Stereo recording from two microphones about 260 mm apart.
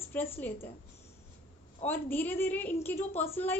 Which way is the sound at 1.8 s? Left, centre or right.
Centre.